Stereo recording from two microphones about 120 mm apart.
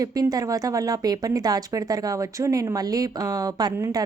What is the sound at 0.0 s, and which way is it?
A woman's voice, 30° right (ahead or behind).